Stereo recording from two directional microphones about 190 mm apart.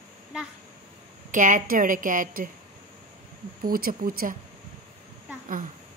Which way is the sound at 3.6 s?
50° right (ahead or behind).